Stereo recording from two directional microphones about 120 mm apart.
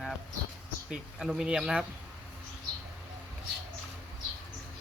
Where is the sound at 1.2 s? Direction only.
5° right (ahead or behind).